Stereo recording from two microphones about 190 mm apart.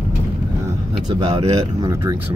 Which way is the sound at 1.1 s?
30° right (ahead or behind).